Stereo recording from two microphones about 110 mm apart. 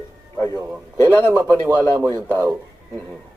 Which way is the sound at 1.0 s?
20° left (ahead or behind).